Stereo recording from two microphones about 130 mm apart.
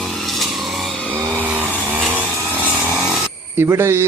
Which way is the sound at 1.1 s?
15° right (ahead or behind).